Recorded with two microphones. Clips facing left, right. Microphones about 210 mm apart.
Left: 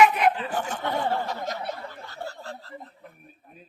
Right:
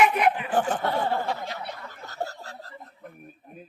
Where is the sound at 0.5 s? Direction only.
40° right (ahead or behind).